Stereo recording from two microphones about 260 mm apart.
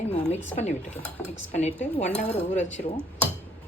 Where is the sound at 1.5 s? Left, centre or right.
Left.